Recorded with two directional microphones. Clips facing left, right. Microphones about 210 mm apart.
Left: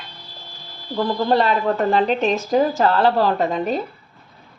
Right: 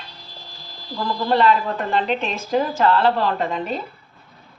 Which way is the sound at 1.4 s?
40° left (ahead or behind).